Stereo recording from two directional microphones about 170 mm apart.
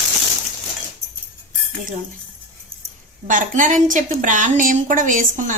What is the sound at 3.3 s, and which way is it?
A woman's voice, 50° right (ahead or behind).